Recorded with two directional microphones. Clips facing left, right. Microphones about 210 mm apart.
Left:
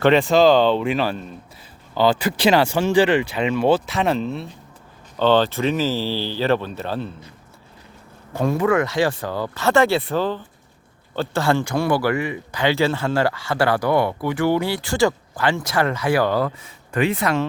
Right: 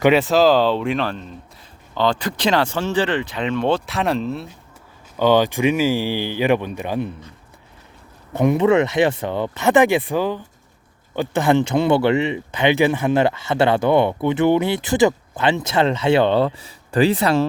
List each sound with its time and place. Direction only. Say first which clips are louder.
0.0 s speech: even; 5° right (ahead or behind)
5.1 s speech: right 1 dB; 10° right (ahead or behind)
8.4 s speech: right 4 dB; 20° right (ahead or behind)